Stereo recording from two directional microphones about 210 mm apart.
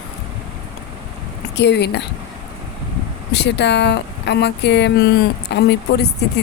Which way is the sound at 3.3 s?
55° left (ahead or behind).